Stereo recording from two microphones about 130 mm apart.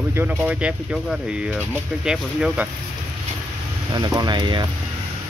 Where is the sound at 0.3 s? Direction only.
10° right (ahead or behind).